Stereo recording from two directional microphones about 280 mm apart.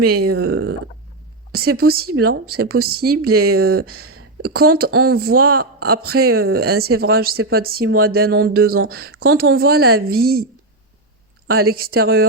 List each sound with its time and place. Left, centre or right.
0.0 s speech: right
1.5 s speech: right